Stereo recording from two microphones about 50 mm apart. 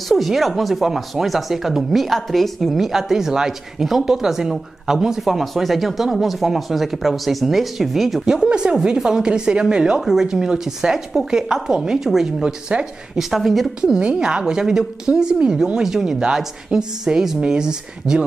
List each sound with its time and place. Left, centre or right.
0.1 s speech: centre
8.3 s a woman's voice: centre
13.2 s speech: centre
13.7 s a woman's voice: centre